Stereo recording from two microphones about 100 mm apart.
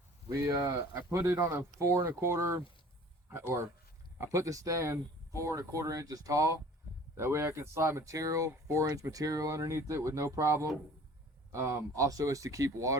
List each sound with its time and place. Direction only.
0.3 s speech: 30° right (ahead or behind)
0.7 s speech: 20° right (ahead or behind)